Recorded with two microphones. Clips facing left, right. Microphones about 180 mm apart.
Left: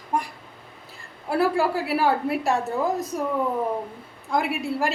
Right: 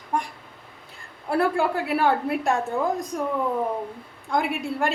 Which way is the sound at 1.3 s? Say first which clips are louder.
Even; centre (ahead or behind).